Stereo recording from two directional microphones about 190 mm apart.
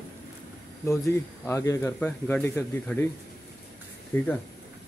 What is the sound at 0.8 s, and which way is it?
Speech, 15° left (ahead or behind).